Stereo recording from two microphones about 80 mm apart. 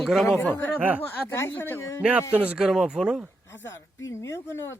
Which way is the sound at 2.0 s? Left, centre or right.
Centre.